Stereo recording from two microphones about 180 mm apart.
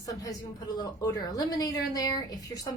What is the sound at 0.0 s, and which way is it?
A woman's voice, 20° left (ahead or behind).